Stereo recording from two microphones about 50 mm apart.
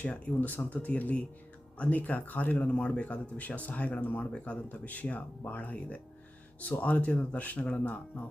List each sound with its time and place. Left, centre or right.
0.3 s speech: left